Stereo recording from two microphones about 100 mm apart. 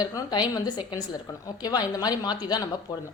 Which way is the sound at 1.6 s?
40° left (ahead or behind).